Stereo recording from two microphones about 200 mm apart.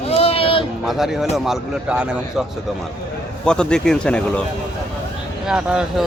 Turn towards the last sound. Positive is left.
turn(degrees=-5)  # may be behind; listen again after turning